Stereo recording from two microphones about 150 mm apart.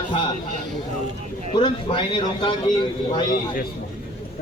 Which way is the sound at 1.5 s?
35° left (ahead or behind).